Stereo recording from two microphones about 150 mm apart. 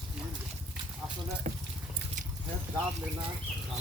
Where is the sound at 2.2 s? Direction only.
55° right (ahead or behind).